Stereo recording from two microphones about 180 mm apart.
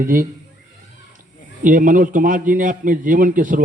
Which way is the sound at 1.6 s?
50° right (ahead or behind).